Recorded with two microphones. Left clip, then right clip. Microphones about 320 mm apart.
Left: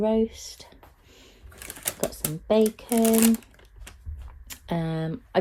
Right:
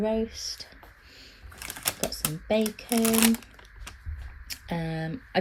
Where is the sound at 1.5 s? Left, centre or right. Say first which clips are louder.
Right 3 dB; centre.